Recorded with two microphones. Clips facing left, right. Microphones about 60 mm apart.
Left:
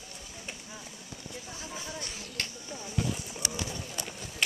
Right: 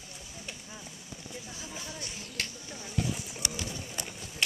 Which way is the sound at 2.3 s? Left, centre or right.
Centre.